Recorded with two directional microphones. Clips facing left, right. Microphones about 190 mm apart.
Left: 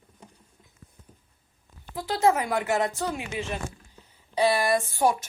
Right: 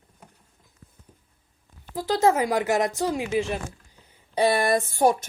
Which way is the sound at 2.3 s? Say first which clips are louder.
Right 3 dB; 20° right (ahead or behind).